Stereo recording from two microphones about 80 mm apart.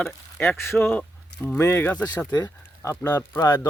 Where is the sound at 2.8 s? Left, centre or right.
Left.